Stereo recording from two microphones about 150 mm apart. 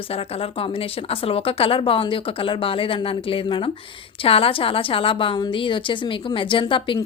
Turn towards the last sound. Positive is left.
turn(degrees=35)  # may be behind; listen again after turning